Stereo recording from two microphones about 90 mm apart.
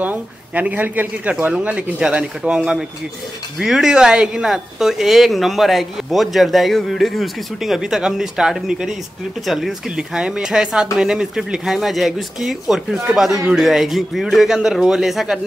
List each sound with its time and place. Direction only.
0.0 s speech: 15° right (ahead or behind)